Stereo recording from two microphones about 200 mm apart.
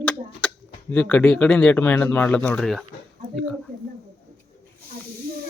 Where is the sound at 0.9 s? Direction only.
5° left (ahead or behind).